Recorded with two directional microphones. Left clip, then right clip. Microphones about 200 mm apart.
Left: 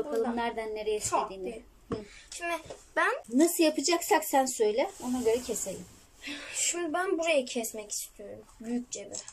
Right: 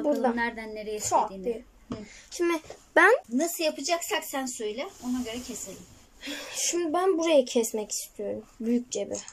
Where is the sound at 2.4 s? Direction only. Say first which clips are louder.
Right 6 dB; 35° right (ahead or behind).